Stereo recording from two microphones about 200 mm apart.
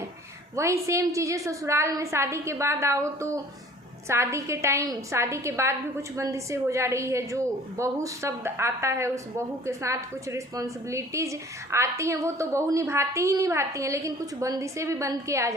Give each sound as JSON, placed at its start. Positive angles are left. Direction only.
{"t": 0.5, "sound": "a woman's voice", "side_deg": -15}